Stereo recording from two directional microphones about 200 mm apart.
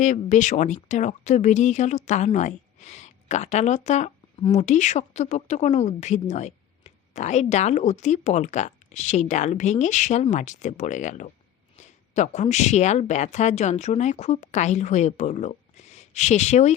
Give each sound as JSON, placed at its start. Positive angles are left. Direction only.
{"t": 0.0, "sound": "speech", "side_deg": 35}